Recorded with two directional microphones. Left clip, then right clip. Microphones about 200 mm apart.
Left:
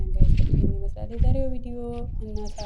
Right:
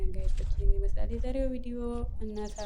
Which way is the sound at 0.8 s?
Centre (ahead or behind).